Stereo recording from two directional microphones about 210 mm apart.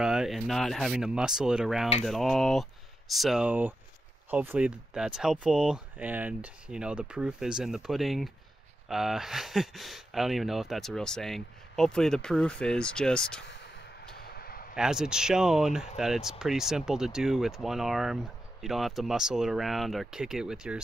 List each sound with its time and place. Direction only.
0.0 s speech: 5° right (ahead or behind)
14.1 s a sound: 45° left (ahead or behind)
14.8 s speech: 5° right (ahead or behind)